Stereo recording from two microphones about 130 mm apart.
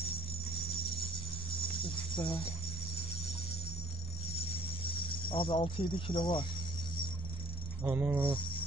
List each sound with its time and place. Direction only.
2.1 s speech: 40° left (ahead or behind)
5.3 s speech: 45° left (ahead or behind)
7.8 s speech: 15° right (ahead or behind)